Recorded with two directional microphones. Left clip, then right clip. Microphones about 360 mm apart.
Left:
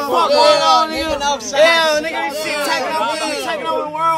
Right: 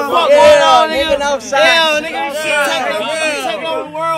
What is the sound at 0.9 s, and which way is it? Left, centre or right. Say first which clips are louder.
A man's voice: right 5 dB; centre.